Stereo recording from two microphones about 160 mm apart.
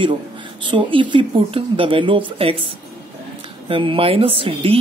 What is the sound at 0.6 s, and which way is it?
Speech, 30° right (ahead or behind).